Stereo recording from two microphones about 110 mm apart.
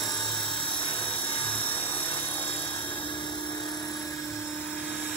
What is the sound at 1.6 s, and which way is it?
Helicopter, 15° left (ahead or behind).